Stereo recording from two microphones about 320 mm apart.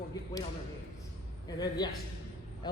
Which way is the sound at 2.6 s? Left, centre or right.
Centre.